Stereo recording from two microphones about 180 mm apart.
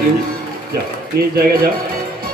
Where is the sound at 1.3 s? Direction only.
55° right (ahead or behind).